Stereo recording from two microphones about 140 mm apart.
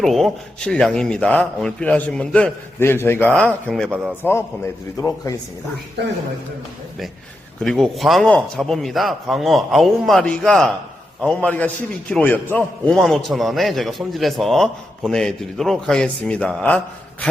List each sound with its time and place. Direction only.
0.0 s a man's voice: centre (ahead or behind)
3.8 s speech: 5° right (ahead or behind)
4.2 s a man's voice: 15° left (ahead or behind)
7.6 s a man's voice: 5° left (ahead or behind)